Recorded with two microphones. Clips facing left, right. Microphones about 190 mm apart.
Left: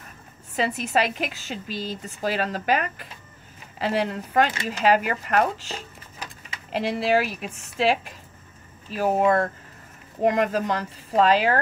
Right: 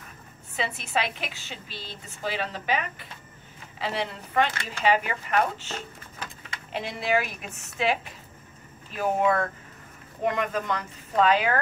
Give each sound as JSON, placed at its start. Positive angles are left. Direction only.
{"t": 0.6, "sound": "a woman's voice", "side_deg": 40}
{"t": 7.0, "sound": "a woman's voice", "side_deg": 35}
{"t": 8.9, "sound": "a woman's voice", "side_deg": 35}